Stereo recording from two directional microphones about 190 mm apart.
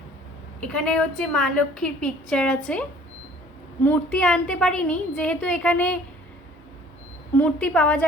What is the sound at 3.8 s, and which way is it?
A woman's voice, 5° left (ahead or behind).